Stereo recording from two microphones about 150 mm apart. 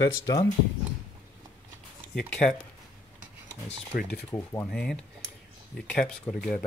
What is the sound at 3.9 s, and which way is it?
Speech, 70° left (ahead or behind).